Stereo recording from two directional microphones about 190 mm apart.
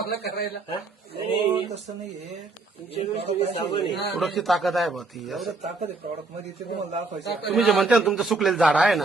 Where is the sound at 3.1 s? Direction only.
30° right (ahead or behind).